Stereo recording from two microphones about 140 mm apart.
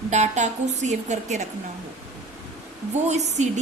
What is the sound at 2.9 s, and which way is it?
Speech, 55° right (ahead or behind).